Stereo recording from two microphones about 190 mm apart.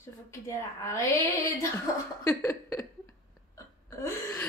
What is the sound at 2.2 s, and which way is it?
Speech, 15° left (ahead or behind).